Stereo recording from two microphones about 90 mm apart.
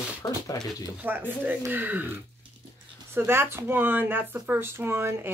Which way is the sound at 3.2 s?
25° right (ahead or behind).